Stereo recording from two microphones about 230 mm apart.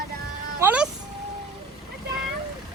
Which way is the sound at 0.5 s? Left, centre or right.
Centre.